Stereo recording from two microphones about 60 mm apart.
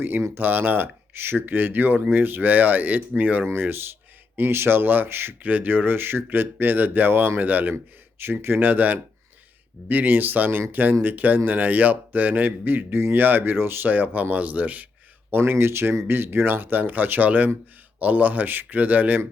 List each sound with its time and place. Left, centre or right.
0.3 s a man's voice: right
3.4 s a man's voice: right
15.3 s a man's voice: right